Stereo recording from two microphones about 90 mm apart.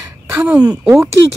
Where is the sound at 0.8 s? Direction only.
30° right (ahead or behind).